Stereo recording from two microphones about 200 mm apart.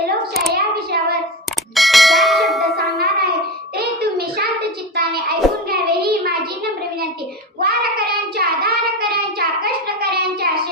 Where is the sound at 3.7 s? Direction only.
50° right (ahead or behind).